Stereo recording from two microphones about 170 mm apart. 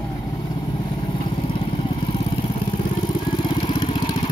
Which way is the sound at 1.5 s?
30° left (ahead or behind).